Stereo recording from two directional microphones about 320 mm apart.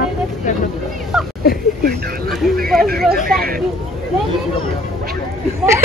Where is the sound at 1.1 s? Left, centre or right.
Centre.